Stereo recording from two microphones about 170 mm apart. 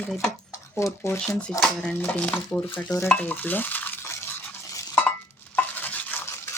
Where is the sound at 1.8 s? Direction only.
10° left (ahead or behind).